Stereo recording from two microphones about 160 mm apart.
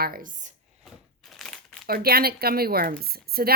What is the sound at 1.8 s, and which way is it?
A woman's voice, 70° right (ahead or behind).